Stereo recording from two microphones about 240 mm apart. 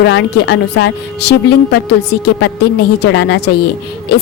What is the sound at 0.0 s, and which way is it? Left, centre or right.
A woman's voice, left.